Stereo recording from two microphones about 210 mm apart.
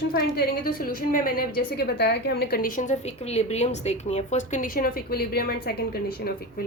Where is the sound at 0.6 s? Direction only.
40° left (ahead or behind).